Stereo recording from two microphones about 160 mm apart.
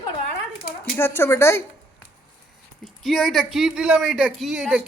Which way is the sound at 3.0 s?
Centre (ahead or behind).